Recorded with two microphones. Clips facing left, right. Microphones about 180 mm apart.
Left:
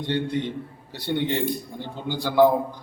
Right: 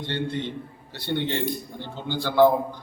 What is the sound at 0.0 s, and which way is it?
Speech, 15° left (ahead or behind).